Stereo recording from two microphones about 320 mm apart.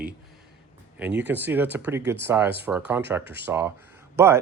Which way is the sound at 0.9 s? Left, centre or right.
Centre.